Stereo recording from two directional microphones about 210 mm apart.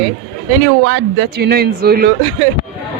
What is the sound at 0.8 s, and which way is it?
A man's voice, 60° right (ahead or behind).